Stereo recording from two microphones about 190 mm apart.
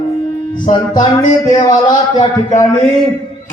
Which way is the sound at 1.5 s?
20° left (ahead or behind).